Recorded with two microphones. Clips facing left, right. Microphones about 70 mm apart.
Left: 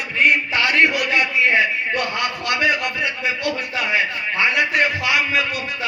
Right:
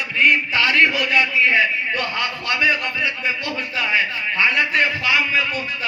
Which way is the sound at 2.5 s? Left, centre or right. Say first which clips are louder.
Even; left.